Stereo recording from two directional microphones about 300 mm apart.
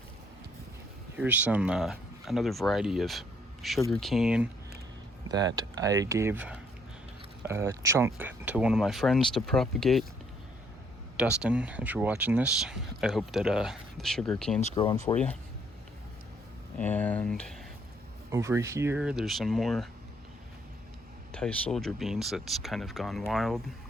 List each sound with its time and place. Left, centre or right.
1.1 s speech: centre
5.5 s speech: centre
11.4 s speech: centre
14.6 s speech: centre
15.0 s speech: centre
16.7 s speech: centre
18.3 s speech: centre
21.3 s speech: centre